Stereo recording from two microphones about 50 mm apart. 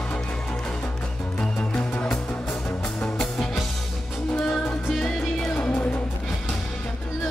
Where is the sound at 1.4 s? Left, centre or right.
Left.